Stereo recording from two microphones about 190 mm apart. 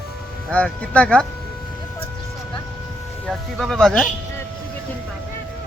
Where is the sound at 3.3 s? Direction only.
Centre (ahead or behind).